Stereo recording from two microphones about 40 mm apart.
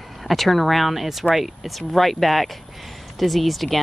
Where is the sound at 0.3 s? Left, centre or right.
Centre.